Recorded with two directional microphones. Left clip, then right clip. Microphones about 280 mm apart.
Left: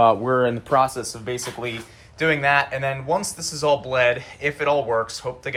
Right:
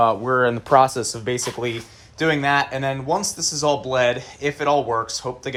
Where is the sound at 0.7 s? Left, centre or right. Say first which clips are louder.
Right 7 dB; right.